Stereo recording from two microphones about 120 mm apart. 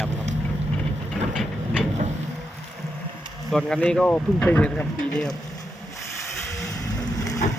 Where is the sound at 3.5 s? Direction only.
5° left (ahead or behind).